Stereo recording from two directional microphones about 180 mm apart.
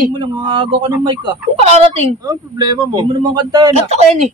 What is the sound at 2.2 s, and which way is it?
Speech, 25° right (ahead or behind).